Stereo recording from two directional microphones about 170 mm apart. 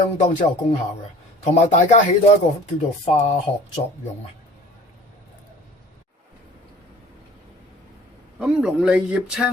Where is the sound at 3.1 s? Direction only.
40° left (ahead or behind).